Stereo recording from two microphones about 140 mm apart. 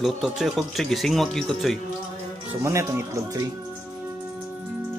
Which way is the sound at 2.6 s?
20° right (ahead or behind).